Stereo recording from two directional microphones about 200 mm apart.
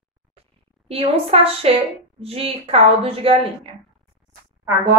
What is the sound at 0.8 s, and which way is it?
Speech, 30° right (ahead or behind).